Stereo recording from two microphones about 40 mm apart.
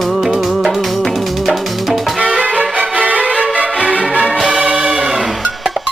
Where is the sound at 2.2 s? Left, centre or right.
Right.